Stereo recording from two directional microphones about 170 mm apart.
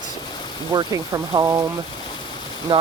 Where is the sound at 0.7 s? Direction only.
20° right (ahead or behind).